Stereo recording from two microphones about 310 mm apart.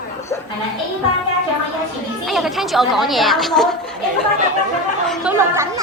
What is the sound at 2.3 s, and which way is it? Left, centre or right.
Speech, centre.